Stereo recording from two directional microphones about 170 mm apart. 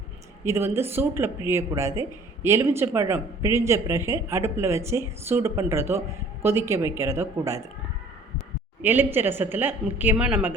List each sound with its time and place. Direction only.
0.4 s speech: 15° right (ahead or behind)
8.8 s speech: 10° right (ahead or behind)